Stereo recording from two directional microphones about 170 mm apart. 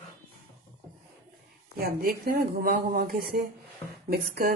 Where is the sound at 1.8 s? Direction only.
65° right (ahead or behind).